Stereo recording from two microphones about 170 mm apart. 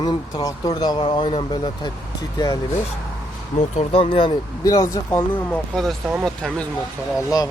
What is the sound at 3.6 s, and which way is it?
Speech, 40° left (ahead or behind).